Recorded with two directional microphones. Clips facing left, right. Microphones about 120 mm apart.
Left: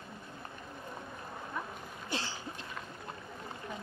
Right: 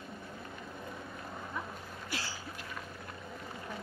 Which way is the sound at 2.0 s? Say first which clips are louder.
Left 3 dB; 20° left (ahead or behind).